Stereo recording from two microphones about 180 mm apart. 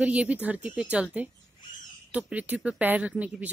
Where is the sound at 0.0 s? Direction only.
5° right (ahead or behind).